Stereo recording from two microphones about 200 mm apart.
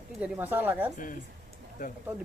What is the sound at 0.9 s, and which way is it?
Speech, 40° left (ahead or behind).